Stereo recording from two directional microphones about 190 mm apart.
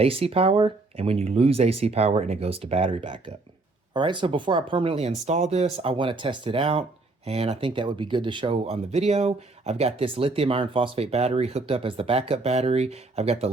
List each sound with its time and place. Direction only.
0.0 s speech: 30° right (ahead or behind)